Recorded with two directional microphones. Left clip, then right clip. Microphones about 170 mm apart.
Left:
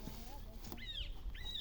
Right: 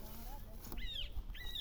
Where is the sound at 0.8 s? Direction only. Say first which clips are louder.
Right 2 dB; 60° right (ahead or behind).